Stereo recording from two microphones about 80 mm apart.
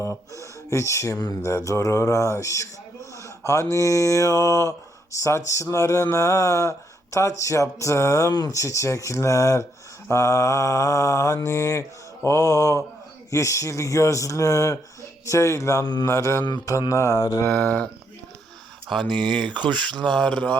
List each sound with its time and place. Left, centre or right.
0.0 s speech: left
16.4 s mantra: left
16.9 s speech: left
17.5 s speech: left
19.0 s speech: right
20.1 s speech: centre